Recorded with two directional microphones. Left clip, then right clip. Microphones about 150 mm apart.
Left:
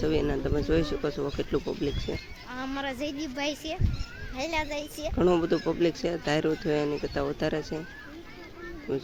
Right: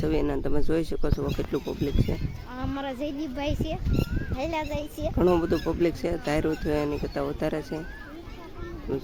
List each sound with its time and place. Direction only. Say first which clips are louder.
0.0 s speech: even; centre (ahead or behind)
8.9 s speech: even; centre (ahead or behind)